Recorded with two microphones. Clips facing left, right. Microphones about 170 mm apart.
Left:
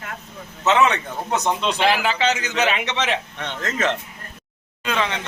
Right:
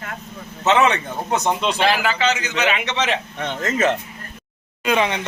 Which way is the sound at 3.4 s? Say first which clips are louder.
Right 4 dB; 5° right (ahead or behind).